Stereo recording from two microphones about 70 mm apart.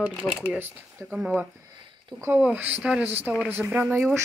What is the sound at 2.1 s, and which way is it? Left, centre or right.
Speech, right.